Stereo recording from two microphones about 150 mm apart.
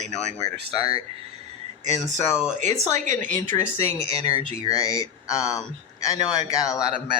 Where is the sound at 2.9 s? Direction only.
55° right (ahead or behind).